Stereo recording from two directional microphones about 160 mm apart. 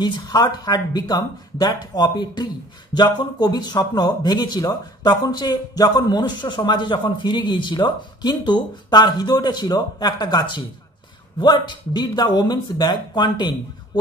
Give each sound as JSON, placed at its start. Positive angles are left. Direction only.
{"t": 0.0, "sound": "speech", "side_deg": 25}